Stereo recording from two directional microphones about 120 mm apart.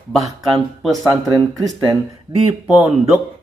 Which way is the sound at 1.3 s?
30° right (ahead or behind).